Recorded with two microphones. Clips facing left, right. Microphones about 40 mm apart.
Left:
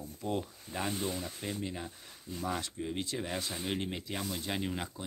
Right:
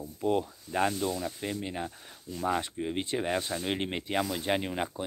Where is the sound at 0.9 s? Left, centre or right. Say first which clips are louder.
Right 4 dB; left.